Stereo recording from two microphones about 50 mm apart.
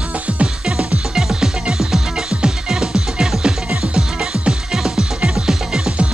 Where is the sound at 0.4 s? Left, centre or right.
Right.